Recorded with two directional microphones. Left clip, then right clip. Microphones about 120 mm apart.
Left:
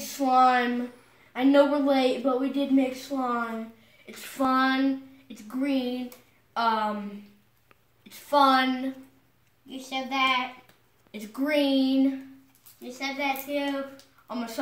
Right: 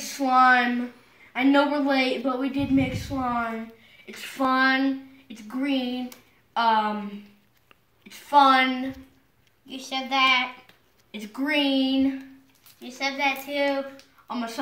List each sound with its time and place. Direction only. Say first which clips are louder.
0.2 s a woman's voice: right 2 dB; 10° left (ahead or behind)
8.1 s a woman's voice: right 3 dB; 20° left (ahead or behind)
9.7 s a woman's voice: right 3 dB; 10° right (ahead or behind)
11.1 s a woman's voice: right 1 dB; 15° left (ahead or behind)
12.9 s a woman's voice: right 4 dB; 15° right (ahead or behind)
14.2 s speech: right 3 dB; 20° left (ahead or behind)